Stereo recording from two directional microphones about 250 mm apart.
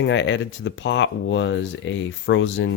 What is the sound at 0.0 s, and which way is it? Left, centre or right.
Speech, left.